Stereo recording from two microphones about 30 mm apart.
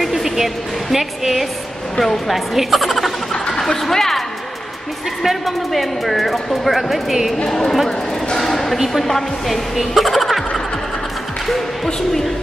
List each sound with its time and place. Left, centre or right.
0.0 s music: centre
0.9 s a woman's voice: centre
2.0 s a woman's voice: centre
2.3 s a man's voice: centre
3.4 s a sound: centre
3.9 s a woman's voice: centre
5.2 s a man's voice: centre
7.4 s a woman's voice: centre
8.4 s a sound: centre
8.7 s a woman's voice: centre
11.4 s a man's voice: centre